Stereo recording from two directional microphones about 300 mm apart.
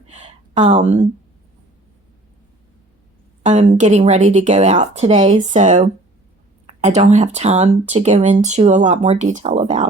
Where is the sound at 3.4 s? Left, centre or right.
Right.